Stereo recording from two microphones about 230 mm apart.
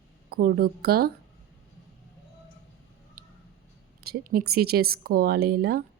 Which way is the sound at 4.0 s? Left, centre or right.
Right.